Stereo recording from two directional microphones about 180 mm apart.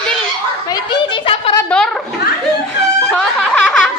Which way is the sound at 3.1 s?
5° left (ahead or behind).